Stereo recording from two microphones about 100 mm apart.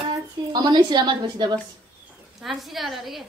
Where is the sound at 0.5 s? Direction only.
45° right (ahead or behind).